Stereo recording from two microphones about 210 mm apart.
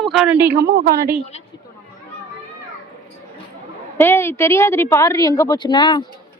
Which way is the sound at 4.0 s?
10° left (ahead or behind).